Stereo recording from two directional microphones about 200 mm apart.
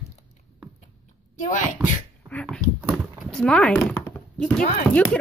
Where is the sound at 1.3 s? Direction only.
40° left (ahead or behind).